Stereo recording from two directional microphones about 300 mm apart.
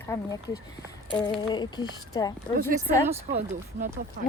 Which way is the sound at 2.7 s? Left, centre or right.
Centre.